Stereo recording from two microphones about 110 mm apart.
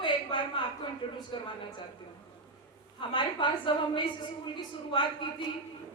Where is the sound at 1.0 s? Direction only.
50° left (ahead or behind).